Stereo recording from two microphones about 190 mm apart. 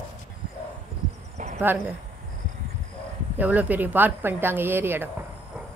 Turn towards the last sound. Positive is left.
turn(degrees=-10)  # may be behind; listen again after turning